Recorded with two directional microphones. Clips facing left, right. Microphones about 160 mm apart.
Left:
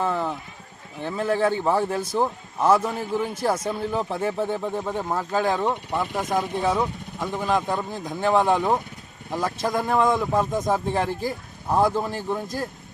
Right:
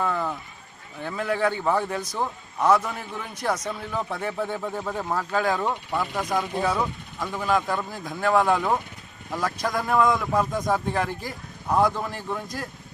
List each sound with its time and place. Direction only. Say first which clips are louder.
0.0 s a sound: left 2 dB; 25° left (ahead or behind)
1.0 s a man's voice: left 3 dB; 30° left (ahead or behind)
6.1 s speech: left 2 dB; centre (ahead or behind)
7.2 s a man's voice: left 1 dB; 20° left (ahead or behind)